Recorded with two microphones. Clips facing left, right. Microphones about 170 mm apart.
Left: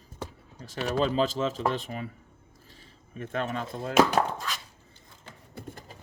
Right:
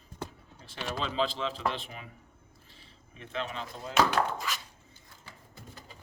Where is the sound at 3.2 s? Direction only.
50° left (ahead or behind).